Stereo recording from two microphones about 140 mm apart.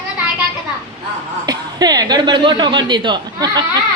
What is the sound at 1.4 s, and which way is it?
Speech, 30° right (ahead or behind).